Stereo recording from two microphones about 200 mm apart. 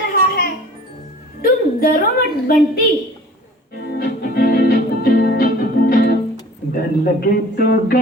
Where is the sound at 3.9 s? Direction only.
55° left (ahead or behind).